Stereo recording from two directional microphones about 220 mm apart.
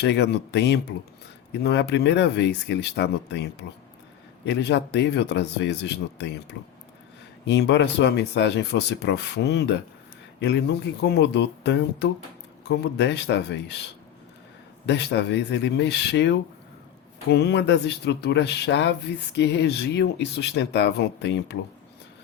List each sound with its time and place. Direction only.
0.0 s speech: 50° left (ahead or behind)
14.8 s speech: 50° left (ahead or behind)